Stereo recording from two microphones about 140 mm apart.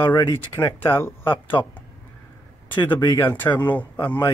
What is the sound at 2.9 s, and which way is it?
Speech, 25° left (ahead or behind).